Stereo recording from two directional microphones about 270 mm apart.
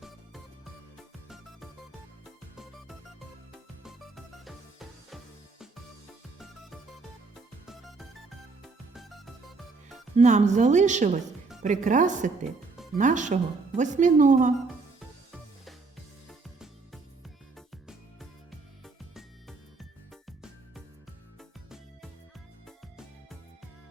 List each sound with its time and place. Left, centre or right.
2.2 s music: centre
7.7 s music: centre
10.2 s speech: right
20.2 s music: centre